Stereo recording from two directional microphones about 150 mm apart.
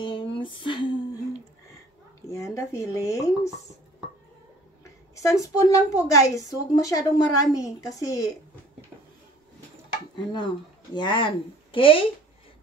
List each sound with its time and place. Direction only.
0.0 s a sound: 35° left (ahead or behind)
2.2 s speech: 20° left (ahead or behind)
5.2 s a woman's voice: 20° left (ahead or behind)
10.1 s speech: 30° left (ahead or behind)